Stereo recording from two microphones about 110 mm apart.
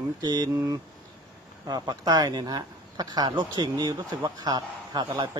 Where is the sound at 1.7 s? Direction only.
35° right (ahead or behind).